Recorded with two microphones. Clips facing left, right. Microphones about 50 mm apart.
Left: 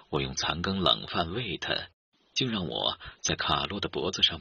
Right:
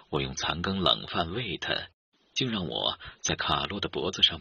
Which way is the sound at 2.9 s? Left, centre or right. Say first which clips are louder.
Even; centre.